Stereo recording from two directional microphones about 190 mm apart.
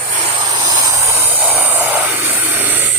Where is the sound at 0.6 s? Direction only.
20° right (ahead or behind).